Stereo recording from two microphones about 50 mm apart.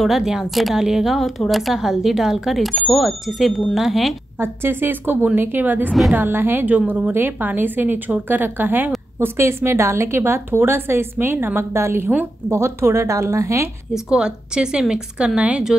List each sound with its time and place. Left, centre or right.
0.0 s speech: centre
4.4 s a woman's voice: right
9.2 s a woman's voice: right
13.9 s speech: centre